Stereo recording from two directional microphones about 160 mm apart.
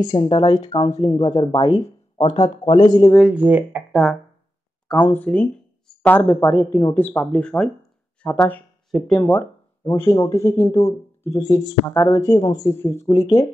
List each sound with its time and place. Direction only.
0.0 s speech: 30° left (ahead or behind)
3.2 s speech: 5° right (ahead or behind)
3.9 s speech: centre (ahead or behind)
9.2 s speech: 15° left (ahead or behind)